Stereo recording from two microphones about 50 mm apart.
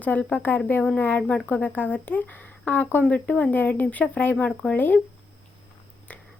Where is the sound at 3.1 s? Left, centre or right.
Left.